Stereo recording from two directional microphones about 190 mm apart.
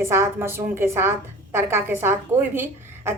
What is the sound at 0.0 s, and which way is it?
A woman's voice, 15° right (ahead or behind).